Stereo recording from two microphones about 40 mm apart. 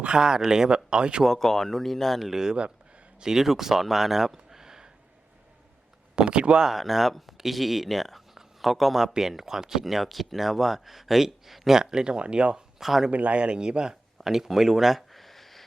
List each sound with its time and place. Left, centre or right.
0.2 s speech: centre
1.2 s speech: centre
2.3 s speech: centre
6.1 s speech: right
6.7 s speech: centre
9.8 s speech: centre; by 12.6 s right
12.8 s speech: centre
13.1 s speech: right
14.2 s a sound: centre